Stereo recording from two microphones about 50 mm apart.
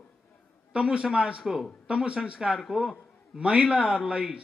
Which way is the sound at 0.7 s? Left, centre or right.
Right.